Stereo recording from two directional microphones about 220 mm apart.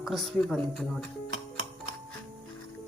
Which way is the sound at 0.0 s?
Centre (ahead or behind).